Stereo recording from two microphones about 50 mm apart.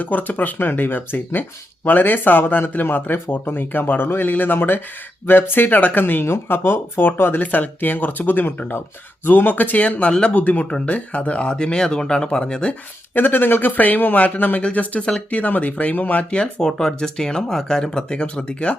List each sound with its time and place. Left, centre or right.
0.0 s speech: left
7.4 s speech: left; by 12.7 s centre
13.1 s speech: left
16.3 s speech: centre